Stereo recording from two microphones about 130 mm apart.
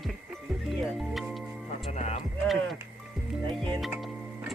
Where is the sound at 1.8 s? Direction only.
55° left (ahead or behind).